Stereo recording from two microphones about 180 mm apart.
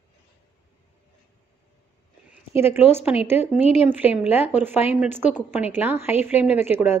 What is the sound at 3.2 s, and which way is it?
Speech, 10° right (ahead or behind).